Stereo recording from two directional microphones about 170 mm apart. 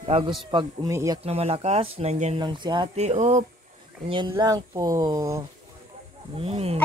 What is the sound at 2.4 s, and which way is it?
Speech, 25° right (ahead or behind).